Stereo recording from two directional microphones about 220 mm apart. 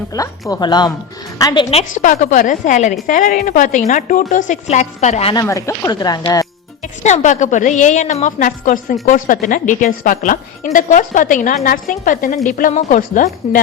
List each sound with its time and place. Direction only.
0.1 s a woman's voice: 15° left (ahead or behind)
2.0 s a woman's voice: 35° left (ahead or behind)
5.3 s speech: 15° left (ahead or behind)
7.0 s a woman's voice: 35° left (ahead or behind)